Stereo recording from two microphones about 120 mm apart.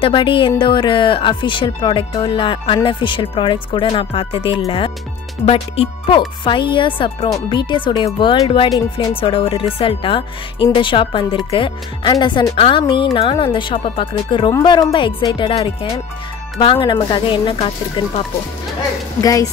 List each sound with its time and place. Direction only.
0.0 s speech: 45° left (ahead or behind)
14.5 s speech: 35° left (ahead or behind)
15.0 s speech: 45° left (ahead or behind)
19.2 s speech: 30° left (ahead or behind)